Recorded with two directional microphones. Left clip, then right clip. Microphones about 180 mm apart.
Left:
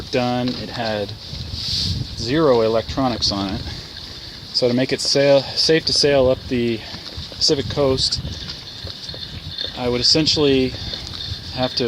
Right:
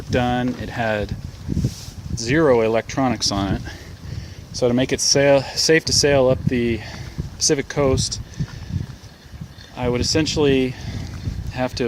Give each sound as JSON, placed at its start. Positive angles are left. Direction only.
{"t": 0.1, "sound": "speech", "side_deg": -25}
{"t": 0.8, "sound": "speech", "side_deg": -40}
{"t": 2.2, "sound": "speech", "side_deg": -40}
{"t": 4.6, "sound": "speech", "side_deg": -25}
{"t": 7.4, "sound": "speech", "side_deg": -35}
{"t": 9.7, "sound": "speech", "side_deg": -20}